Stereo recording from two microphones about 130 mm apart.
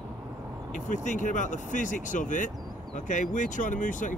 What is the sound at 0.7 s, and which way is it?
Speech, 70° left (ahead or behind).